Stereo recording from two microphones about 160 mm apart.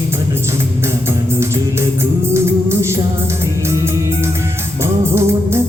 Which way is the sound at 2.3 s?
15° right (ahead or behind).